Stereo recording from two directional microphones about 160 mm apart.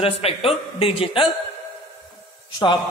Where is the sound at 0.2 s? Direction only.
35° left (ahead or behind).